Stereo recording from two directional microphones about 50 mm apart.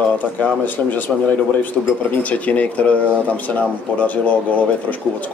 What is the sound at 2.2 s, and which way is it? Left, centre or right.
Speech, left.